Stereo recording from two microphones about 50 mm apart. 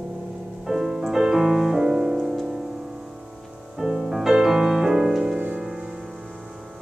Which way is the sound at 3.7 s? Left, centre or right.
Centre.